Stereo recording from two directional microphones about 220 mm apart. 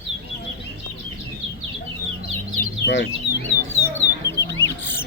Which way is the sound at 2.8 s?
50° left (ahead or behind).